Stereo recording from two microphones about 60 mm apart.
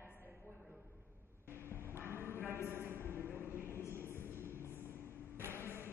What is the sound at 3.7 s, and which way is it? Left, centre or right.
Train, left.